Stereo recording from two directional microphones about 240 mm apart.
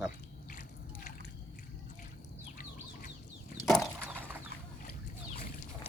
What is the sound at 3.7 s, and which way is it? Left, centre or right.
Chicken, centre.